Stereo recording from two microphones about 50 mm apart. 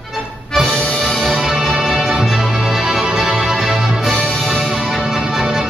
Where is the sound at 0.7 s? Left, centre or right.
Centre.